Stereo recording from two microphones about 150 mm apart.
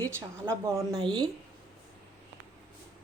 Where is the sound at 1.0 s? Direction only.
30° right (ahead or behind).